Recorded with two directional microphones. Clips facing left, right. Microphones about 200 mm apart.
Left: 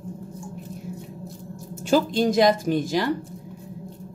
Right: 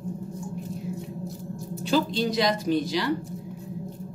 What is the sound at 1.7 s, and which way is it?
Speech, 50° left (ahead or behind).